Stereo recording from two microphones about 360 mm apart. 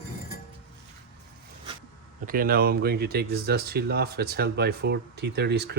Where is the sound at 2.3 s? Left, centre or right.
Right.